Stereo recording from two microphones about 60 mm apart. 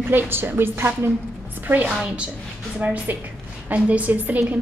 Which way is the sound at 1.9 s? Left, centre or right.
Centre.